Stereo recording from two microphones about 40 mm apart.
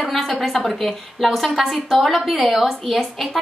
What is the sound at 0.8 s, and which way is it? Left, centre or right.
A woman's voice, centre.